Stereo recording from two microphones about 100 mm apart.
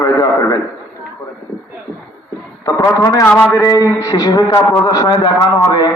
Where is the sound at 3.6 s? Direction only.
35° left (ahead or behind).